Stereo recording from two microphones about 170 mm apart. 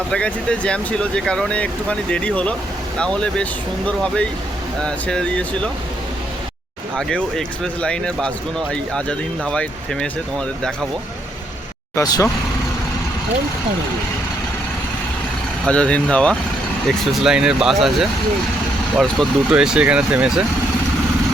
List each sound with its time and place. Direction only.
0.1 s speech: 5° left (ahead or behind)
6.9 s speech: 5° left (ahead or behind)
11.9 s speech: 20° left (ahead or behind)
15.6 s speech: 5° left (ahead or behind)